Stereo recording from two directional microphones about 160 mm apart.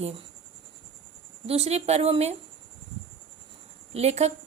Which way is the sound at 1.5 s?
40° right (ahead or behind).